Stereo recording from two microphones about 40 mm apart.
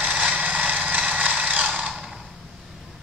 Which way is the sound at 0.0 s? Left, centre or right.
Right.